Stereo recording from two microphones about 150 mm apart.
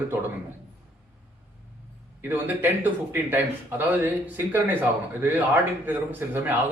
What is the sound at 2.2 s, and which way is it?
A man's voice, 15° right (ahead or behind).